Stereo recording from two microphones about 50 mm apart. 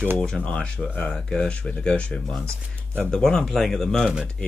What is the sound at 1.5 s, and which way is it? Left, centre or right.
Speech, left.